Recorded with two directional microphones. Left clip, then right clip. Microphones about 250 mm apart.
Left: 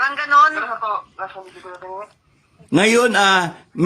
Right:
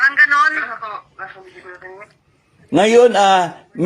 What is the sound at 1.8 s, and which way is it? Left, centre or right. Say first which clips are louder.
Speech: left 9 dB; centre.